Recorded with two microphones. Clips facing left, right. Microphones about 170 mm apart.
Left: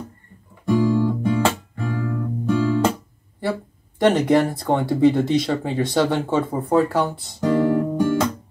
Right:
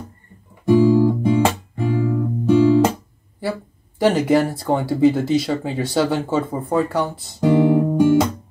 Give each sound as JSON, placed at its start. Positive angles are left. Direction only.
{"t": 0.8, "sound": "guitar", "side_deg": -15}
{"t": 4.0, "sound": "speech", "side_deg": -5}
{"t": 7.3, "sound": "guitar", "side_deg": -20}